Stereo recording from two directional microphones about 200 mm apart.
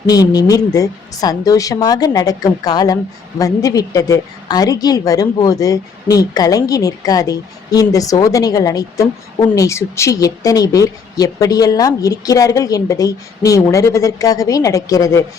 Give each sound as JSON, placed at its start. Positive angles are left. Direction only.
{"t": 0.0, "sound": "a woman's voice", "side_deg": 20}